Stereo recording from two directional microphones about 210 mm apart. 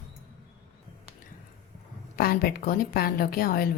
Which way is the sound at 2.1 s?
45° left (ahead or behind).